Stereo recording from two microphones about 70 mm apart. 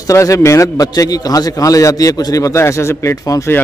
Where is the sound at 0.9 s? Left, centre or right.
Left.